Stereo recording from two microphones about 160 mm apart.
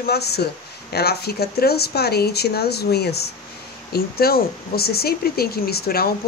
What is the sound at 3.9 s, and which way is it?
Speech, 75° left (ahead or behind).